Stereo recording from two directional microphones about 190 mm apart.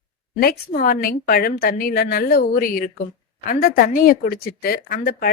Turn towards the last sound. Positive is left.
turn(degrees=50)  # may be behind; listen again after turning